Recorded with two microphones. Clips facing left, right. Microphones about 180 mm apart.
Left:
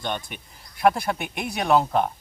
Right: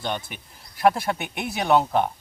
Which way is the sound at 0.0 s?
5° right (ahead or behind).